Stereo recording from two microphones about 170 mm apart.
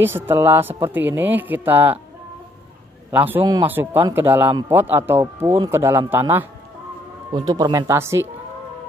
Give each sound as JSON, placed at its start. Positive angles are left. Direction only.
{"t": 0.0, "sound": "speech", "side_deg": -15}
{"t": 3.1, "sound": "a man's voice", "side_deg": -10}
{"t": 7.3, "sound": "speech", "side_deg": -25}